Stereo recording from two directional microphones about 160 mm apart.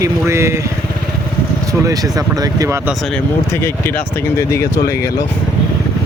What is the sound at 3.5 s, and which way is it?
Speech, 15° left (ahead or behind).